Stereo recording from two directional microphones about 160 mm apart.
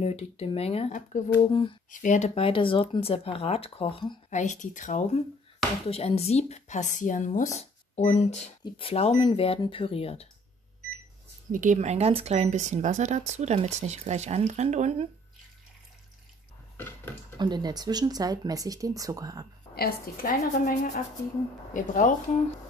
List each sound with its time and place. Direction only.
0.0 s speech: 40° left (ahead or behind)
1.4 s speech: 30° left (ahead or behind)
1.9 s speech: 55° left (ahead or behind); by 4.2 s 30° left (ahead or behind)
4.3 s speech: 50° left (ahead or behind)
5.9 s speech: 40° left (ahead or behind)
11.5 s speech: 50° right (ahead or behind)
16.7 s a sound: 15° left (ahead or behind)
17.4 s speech: 25° right (ahead or behind)
19.7 s a woman's voice: 70° left (ahead or behind); by 22.1 s 55° left (ahead or behind)